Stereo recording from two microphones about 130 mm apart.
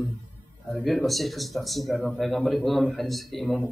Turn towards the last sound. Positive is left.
turn(degrees=0)  # may be behind; listen again after turning